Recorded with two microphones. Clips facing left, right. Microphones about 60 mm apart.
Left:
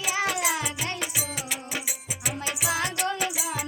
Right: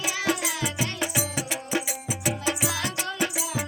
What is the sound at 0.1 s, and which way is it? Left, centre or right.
Music, left.